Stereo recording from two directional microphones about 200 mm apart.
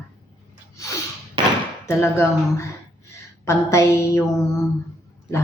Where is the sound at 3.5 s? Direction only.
15° left (ahead or behind).